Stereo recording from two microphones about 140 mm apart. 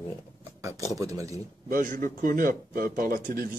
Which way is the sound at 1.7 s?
75° right (ahead or behind).